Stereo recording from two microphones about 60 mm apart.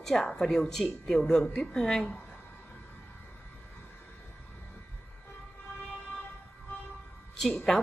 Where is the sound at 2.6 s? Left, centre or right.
Centre.